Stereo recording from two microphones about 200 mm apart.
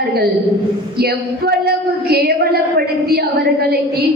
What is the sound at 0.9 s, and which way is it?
A woman's voice, 50° right (ahead or behind).